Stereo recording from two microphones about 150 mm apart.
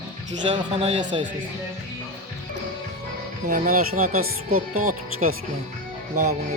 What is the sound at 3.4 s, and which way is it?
Speech, 65° right (ahead or behind).